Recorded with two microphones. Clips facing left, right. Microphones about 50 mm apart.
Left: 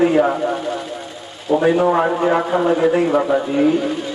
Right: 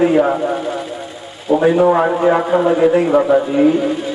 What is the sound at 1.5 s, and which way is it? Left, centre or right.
A man's voice, centre.